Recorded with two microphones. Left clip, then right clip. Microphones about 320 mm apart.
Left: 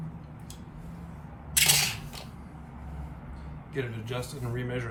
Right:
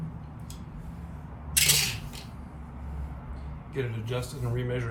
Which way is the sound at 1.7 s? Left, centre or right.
Centre.